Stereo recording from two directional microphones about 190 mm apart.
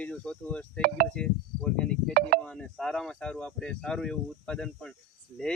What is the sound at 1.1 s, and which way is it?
Insect, 5° left (ahead or behind).